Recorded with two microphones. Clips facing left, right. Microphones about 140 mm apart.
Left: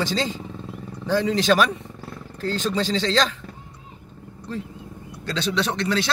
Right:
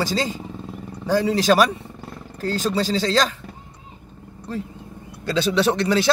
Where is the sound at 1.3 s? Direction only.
40° right (ahead or behind).